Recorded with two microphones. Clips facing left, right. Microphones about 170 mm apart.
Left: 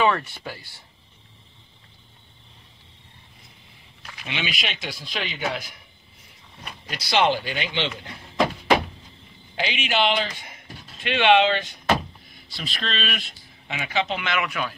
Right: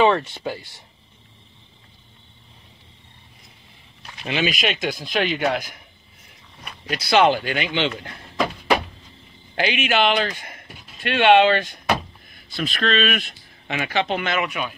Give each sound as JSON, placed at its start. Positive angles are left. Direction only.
{"t": 0.0, "sound": "speech", "side_deg": -25}
{"t": 4.3, "sound": "speech", "side_deg": -45}
{"t": 6.9, "sound": "speech", "side_deg": -55}
{"t": 9.6, "sound": "a man's voice", "side_deg": -55}
{"t": 14.4, "sound": "speech", "side_deg": -20}